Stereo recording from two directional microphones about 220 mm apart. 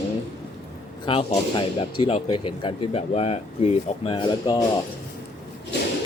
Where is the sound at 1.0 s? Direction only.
25° left (ahead or behind).